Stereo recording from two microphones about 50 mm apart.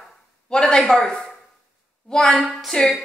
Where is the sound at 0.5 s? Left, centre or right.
Centre.